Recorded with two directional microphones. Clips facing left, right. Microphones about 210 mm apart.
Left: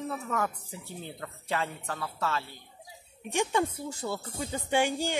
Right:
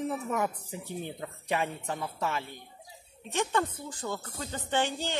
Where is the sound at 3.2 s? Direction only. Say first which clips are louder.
Left 2 dB; 15° left (ahead or behind).